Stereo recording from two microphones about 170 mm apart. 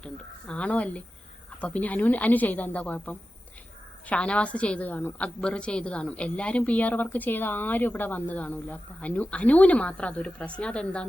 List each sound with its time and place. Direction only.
0.0 s a woman's voice: 5° left (ahead or behind)